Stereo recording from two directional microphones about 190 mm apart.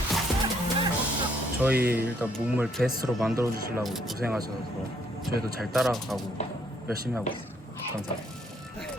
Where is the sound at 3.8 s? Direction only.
Centre (ahead or behind).